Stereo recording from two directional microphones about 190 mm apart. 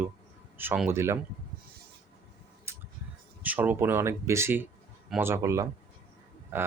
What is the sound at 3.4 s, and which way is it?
Speech, 10° right (ahead or behind).